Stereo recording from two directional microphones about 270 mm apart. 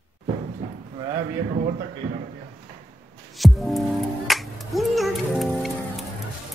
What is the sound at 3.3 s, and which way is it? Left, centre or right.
Music, centre.